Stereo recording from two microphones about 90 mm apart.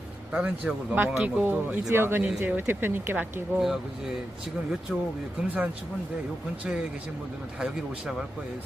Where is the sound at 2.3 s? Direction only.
15° right (ahead or behind).